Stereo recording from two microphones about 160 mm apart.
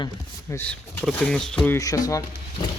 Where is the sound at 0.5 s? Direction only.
10° left (ahead or behind).